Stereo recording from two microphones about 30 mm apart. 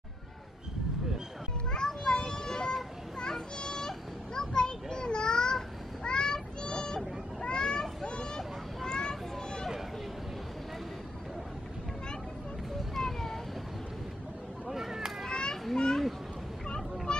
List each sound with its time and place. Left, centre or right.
1.7 s children playing: left
6.0 s child singing: left
6.6 s a sound: left
7.5 s children playing: left
8.4 s a sound: centre
12.9 s cat: centre
14.7 s a sound: centre
15.2 s children playing: left
17.1 s vehicle: left